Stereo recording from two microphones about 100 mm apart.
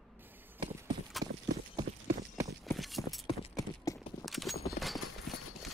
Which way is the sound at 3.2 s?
35° left (ahead or behind).